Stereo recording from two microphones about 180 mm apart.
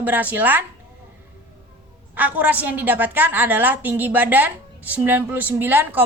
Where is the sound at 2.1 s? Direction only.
10° right (ahead or behind).